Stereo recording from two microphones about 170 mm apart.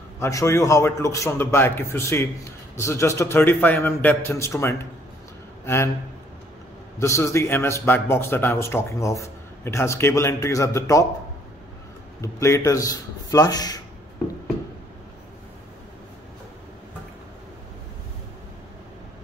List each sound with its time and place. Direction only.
0.2 s a man's voice: 15° left (ahead or behind)
7.0 s a man's voice: 15° left (ahead or behind)
12.2 s a man's voice: 15° left (ahead or behind)